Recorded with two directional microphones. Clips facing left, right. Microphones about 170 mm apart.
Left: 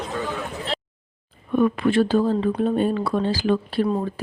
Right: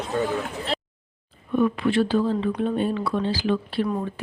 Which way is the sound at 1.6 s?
50° left (ahead or behind).